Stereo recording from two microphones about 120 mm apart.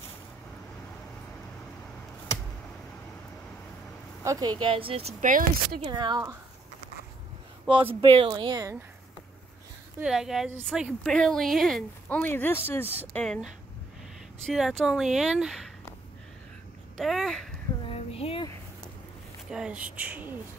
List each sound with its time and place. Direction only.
4.2 s speech: 30° right (ahead or behind); by 5.1 s 50° right (ahead or behind)
5.2 s speech: 90° right
5.8 s speech: 40° right (ahead or behind)
7.9 s speech: 50° right (ahead or behind)
10.0 s speech: 5° right (ahead or behind)
11.1 s speech: 5° left (ahead or behind)
12.2 s speech: 15° left (ahead or behind)
14.4 s speech: centre (ahead or behind)
16.9 s a sound: centre (ahead or behind)
17.8 s a sound: 55° left (ahead or behind)
19.5 s speech: 10° right (ahead or behind)